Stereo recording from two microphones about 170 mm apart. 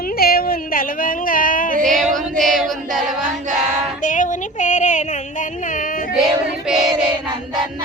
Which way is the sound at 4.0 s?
50° left (ahead or behind).